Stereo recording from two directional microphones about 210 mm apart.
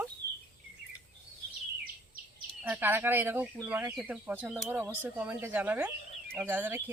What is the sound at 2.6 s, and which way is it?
Speech, 10° right (ahead or behind).